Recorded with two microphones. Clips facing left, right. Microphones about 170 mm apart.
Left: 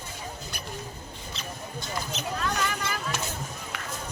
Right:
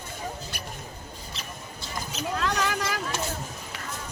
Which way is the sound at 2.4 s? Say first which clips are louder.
Right 3 dB; 90° right.